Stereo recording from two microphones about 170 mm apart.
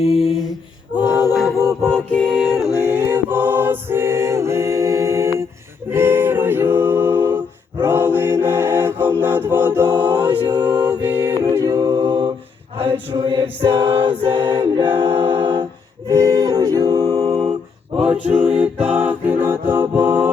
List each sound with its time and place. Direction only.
0.0 s a sound: 35° left (ahead or behind)
0.9 s a capella: 25° left (ahead or behind)
1.3 s a capella: centre (ahead or behind)
1.8 s music: centre (ahead or behind)
3.1 s choir: 10° right (ahead or behind)
5.9 s music: 15° right (ahead or behind)
10.4 s mantra: 25° right (ahead or behind)
11.0 s a capella: 10° right (ahead or behind); by 12.3 s 30° right (ahead or behind)
12.7 s a sound: 35° right (ahead or behind)
14.2 s a capella: 30° right (ahead or behind)
16.0 s music: 20° right (ahead or behind)
18.0 s music: 5° right (ahead or behind)